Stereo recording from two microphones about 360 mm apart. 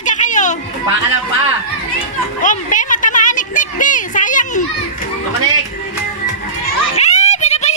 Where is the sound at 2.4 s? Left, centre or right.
Left.